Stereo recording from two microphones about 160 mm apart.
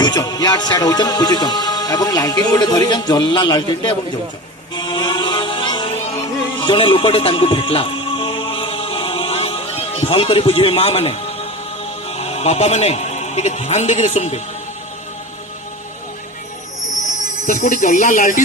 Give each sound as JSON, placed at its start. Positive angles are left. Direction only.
{"t": 0.0, "sound": "music", "side_deg": 25}
{"t": 12.0, "sound": "a man's voice", "side_deg": 40}
{"t": 17.4, "sound": "speech", "side_deg": 50}